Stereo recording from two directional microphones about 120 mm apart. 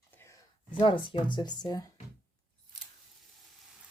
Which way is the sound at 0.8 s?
45° left (ahead or behind).